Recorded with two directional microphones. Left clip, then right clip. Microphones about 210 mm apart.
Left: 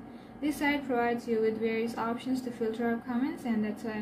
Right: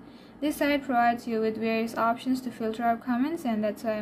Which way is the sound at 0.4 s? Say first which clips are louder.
Right 4 dB; 50° right (ahead or behind).